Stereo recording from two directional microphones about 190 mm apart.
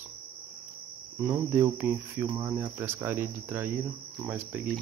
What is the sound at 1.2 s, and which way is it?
Speech, 10° right (ahead or behind).